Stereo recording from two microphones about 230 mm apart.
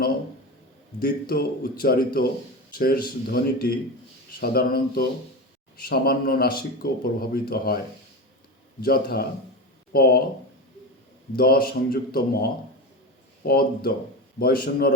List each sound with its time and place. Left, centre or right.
0.9 s speech: left
8.8 s speech: left
11.3 s speech: left